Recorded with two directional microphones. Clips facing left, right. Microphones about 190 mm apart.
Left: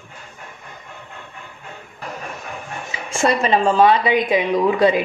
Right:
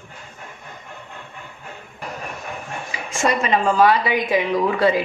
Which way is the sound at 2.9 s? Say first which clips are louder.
Even; 25° left (ahead or behind).